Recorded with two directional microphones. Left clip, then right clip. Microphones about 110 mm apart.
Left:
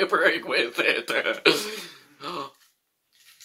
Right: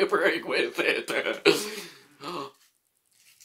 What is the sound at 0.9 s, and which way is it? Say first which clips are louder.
Speech: left 3 dB; 35° right (ahead or behind).